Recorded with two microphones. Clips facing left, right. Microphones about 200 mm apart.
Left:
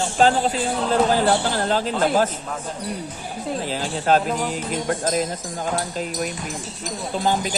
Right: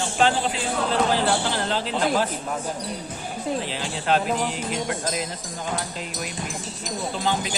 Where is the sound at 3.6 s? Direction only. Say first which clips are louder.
Left 4 dB; 40° left (ahead or behind).